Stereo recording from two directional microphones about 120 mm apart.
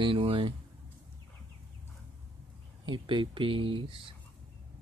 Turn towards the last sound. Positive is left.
turn(degrees=-45)  # may be behind; listen again after turning